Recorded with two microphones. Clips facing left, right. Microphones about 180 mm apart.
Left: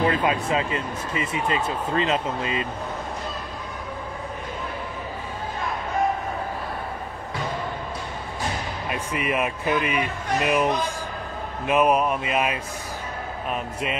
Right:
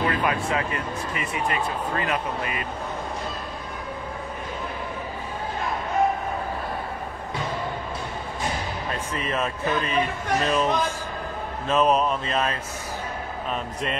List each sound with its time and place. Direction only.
0.1 s speech: 20° left (ahead or behind)
8.9 s a man's voice: 15° left (ahead or behind)